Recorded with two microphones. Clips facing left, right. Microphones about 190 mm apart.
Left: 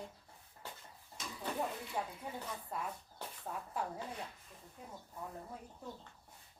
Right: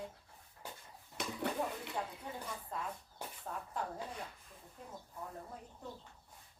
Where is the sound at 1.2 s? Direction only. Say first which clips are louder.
Right 7 dB; 65° right (ahead or behind).